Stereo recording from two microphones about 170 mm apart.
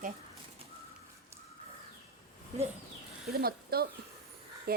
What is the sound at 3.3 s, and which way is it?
Speech, 65° right (ahead or behind).